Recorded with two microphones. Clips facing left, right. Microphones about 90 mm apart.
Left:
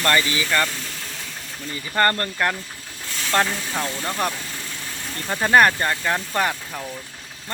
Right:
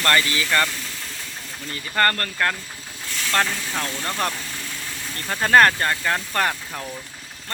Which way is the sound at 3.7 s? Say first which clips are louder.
Left 1 dB; 10° left (ahead or behind).